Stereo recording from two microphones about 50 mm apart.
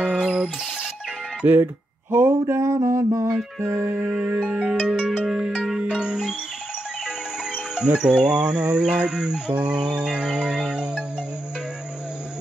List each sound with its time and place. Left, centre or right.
0.0 s music: centre
1.6 s a sound: right
3.6 s music: right
3.9 s music: right
4.4 s music: right
4.8 s music: centre
7.5 s music: centre